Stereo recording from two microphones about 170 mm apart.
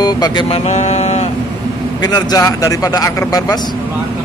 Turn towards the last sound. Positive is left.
turn(degrees=20)  # may be behind; listen again after turning